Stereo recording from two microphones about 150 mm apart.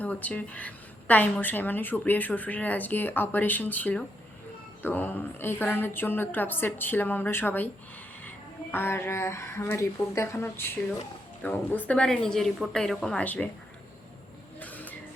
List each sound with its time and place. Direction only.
0.0 s a woman's voice: 10° left (ahead or behind)
8.7 s a woman's voice: 15° left (ahead or behind)
14.6 s vehicle: 10° left (ahead or behind)